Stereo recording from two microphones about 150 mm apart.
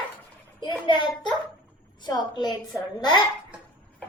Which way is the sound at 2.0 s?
30° left (ahead or behind).